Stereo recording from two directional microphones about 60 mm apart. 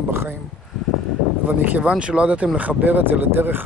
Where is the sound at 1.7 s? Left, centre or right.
Right.